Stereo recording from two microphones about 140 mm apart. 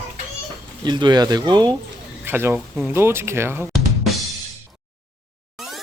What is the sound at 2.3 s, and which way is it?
Speech, 15° right (ahead or behind).